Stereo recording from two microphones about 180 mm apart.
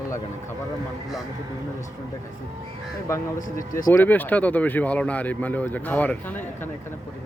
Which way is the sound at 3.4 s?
50° left (ahead or behind).